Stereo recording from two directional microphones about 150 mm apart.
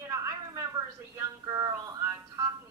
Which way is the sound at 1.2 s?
20° right (ahead or behind).